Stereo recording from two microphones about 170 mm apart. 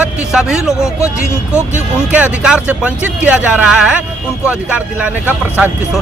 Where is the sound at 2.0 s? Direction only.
10° right (ahead or behind).